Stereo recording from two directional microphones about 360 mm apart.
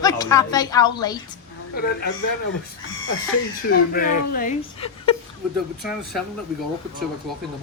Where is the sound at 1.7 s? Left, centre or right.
Left.